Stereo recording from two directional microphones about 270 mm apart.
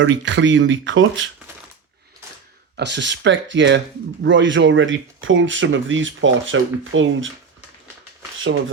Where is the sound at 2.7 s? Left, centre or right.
Right.